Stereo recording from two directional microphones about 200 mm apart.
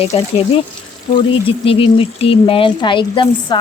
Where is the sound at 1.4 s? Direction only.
25° left (ahead or behind).